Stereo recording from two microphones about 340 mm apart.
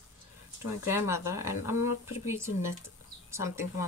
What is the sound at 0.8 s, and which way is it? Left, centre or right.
Speech, centre.